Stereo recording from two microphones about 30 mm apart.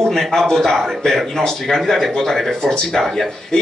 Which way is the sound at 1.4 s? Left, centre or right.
Centre.